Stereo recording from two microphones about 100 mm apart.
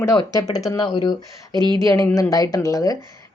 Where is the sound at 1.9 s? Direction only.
30° left (ahead or behind).